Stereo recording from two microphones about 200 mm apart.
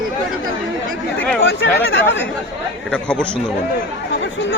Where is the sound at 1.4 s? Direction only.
70° left (ahead or behind).